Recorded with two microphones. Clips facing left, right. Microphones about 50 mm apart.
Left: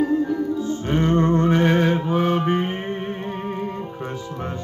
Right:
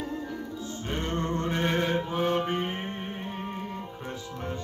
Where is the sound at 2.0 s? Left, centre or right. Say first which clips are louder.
Left 7 dB; left.